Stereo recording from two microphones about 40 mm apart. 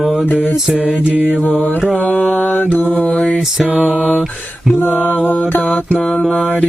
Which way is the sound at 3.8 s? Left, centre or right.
Right.